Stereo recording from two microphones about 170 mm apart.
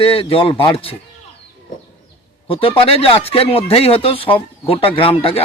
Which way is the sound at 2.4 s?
30° left (ahead or behind).